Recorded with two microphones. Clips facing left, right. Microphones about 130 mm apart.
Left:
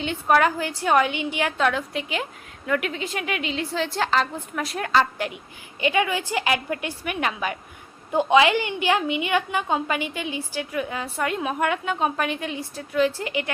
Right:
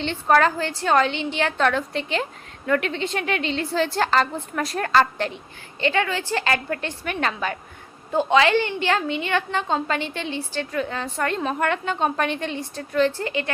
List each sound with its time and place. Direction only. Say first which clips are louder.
0.0 s a woman's voice: right 1 dB; 10° left (ahead or behind)